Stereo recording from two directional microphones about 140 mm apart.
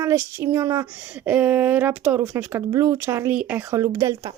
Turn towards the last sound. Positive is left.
turn(degrees=-20)  # may be behind; listen again after turning